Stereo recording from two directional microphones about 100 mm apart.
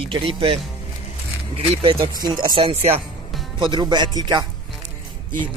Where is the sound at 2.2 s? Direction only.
40° right (ahead or behind).